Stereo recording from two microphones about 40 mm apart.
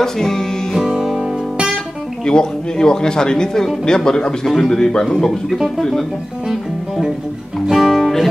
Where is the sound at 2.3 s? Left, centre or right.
Centre.